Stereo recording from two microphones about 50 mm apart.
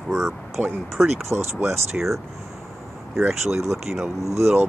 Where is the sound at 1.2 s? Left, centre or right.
Right.